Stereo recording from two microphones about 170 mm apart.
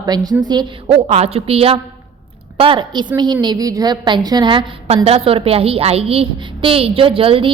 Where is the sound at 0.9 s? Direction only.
35° right (ahead or behind).